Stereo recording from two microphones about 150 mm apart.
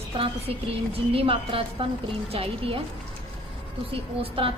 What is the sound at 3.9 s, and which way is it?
Speech, 40° right (ahead or behind).